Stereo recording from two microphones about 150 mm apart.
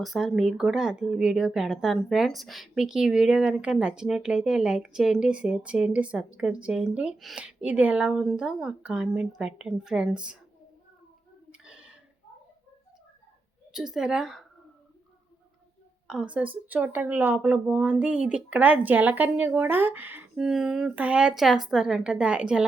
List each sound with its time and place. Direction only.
0.0 s speech: centre (ahead or behind)
11.5 s a sound: 5° right (ahead or behind)
13.7 s speech: 5° right (ahead or behind)
16.0 s speech: 5° right (ahead or behind)